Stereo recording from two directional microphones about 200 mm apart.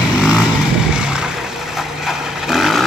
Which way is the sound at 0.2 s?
5° right (ahead or behind).